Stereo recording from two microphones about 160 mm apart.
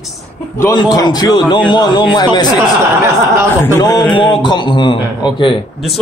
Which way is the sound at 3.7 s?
20° left (ahead or behind).